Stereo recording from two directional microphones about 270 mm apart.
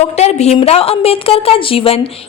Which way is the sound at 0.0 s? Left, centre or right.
Left.